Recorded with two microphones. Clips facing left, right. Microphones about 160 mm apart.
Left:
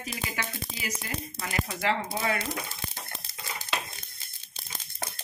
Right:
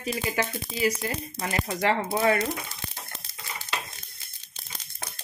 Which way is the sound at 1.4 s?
40° right (ahead or behind).